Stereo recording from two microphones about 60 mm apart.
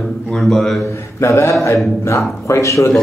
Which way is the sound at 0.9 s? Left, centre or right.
Left.